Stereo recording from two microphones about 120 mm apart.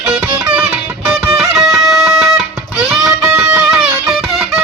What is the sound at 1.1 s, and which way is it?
Music, 5° right (ahead or behind).